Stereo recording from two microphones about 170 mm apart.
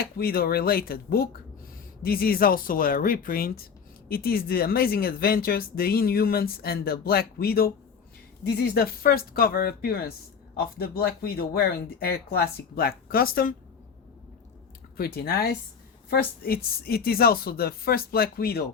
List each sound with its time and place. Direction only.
0.0 s speech: 65° left (ahead or behind)
14.9 s speech: 65° left (ahead or behind)